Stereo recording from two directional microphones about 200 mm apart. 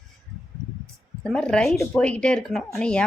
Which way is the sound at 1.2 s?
5° left (ahead or behind).